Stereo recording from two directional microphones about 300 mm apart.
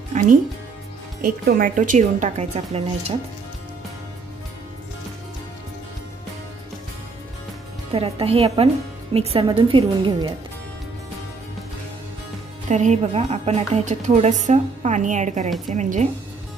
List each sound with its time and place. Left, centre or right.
0.1 s a woman's voice: right
7.9 s a woman's voice: centre
12.6 s a woman's voice: right